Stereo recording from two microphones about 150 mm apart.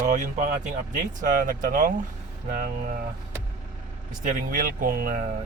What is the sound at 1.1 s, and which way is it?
Speech, 60° right (ahead or behind).